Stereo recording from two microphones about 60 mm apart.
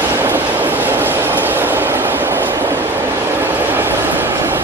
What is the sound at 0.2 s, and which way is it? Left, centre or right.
Train, right.